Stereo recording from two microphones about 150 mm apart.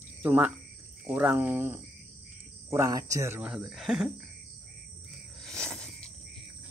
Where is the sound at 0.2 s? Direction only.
10° right (ahead or behind).